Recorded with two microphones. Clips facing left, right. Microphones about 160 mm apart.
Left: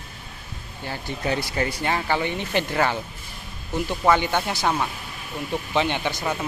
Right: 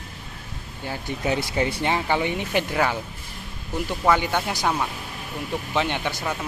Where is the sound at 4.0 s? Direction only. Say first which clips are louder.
Left 1 dB; centre (ahead or behind).